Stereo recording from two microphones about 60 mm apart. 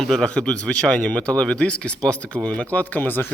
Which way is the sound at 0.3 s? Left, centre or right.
Centre.